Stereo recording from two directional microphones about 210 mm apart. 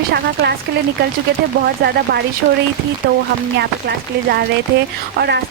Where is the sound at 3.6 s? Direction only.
50° right (ahead or behind).